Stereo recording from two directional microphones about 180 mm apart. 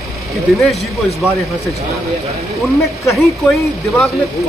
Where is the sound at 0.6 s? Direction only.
Centre (ahead or behind).